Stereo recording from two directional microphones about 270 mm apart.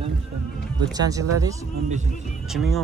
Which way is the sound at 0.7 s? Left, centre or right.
Centre.